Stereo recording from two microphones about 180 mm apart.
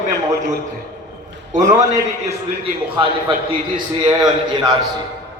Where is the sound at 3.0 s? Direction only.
25° right (ahead or behind).